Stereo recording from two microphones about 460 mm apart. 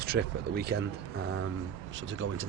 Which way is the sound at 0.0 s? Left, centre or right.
Centre.